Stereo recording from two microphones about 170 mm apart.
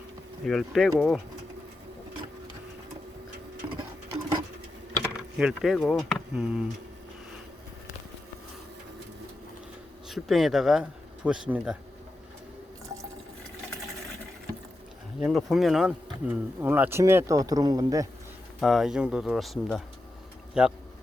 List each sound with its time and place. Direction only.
0.4 s speech: centre (ahead or behind)
3.8 s printer: 25° right (ahead or behind)
5.4 s speech: centre (ahead or behind)
10.1 s speech: centre (ahead or behind)
15.2 s speech: centre (ahead or behind); by 18.1 s 20° right (ahead or behind)
18.6 s speech: centre (ahead or behind)